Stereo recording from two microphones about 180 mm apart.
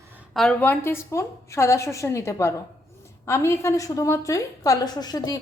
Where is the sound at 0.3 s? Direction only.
5° left (ahead or behind).